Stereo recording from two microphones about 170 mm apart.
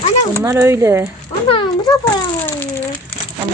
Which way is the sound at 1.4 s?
30° left (ahead or behind).